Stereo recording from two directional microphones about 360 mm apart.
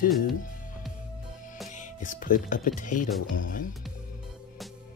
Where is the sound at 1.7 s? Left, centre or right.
Left.